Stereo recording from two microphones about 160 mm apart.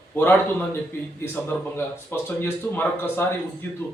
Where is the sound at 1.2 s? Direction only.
15° left (ahead or behind).